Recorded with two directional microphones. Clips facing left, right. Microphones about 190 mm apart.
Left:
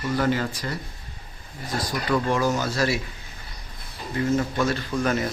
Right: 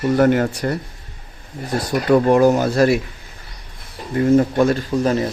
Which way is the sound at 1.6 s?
50° right (ahead or behind).